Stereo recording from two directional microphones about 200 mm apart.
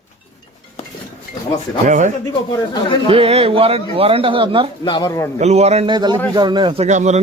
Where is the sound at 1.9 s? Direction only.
40° right (ahead or behind).